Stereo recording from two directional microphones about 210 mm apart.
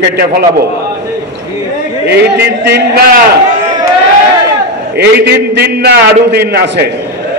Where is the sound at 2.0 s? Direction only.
50° right (ahead or behind).